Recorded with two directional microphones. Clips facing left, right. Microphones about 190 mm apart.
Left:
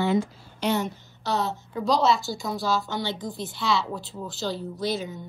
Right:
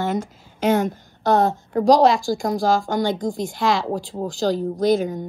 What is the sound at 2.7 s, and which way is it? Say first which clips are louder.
Speech: right 7 dB; 50° right (ahead or behind).